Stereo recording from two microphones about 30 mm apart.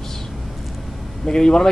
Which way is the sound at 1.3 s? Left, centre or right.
Left.